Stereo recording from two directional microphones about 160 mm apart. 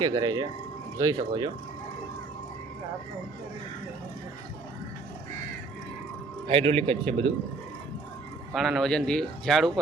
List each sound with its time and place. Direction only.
0.0 s speech: 25° right (ahead or behind)
6.5 s a man's voice: 35° right (ahead or behind)
8.5 s speech: centre (ahead or behind)